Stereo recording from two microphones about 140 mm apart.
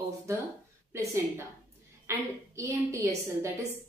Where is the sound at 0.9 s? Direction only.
20° right (ahead or behind).